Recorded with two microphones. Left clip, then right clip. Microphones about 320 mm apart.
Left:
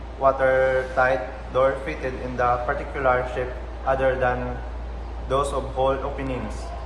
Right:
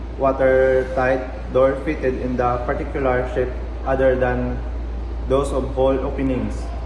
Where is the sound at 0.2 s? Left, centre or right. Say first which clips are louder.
Right 3 dB; centre.